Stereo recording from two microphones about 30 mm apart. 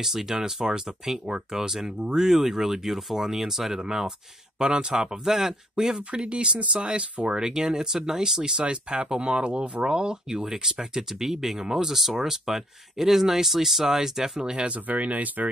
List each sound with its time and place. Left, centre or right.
0.0 s speech: centre
4.6 s speech: right
5.9 s speech: right
7.2 s speech: right
8.5 s speech: right
9.8 s speech: right
10.4 s speech: centre
14.9 s speech: right